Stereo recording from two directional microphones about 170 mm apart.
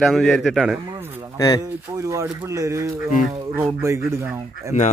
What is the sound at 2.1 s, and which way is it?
Speech, 15° right (ahead or behind).